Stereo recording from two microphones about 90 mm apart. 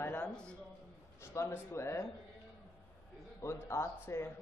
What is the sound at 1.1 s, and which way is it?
Speech, 30° left (ahead or behind).